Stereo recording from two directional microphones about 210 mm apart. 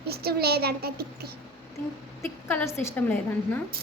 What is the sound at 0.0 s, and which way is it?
A child's voice, 50° right (ahead or behind).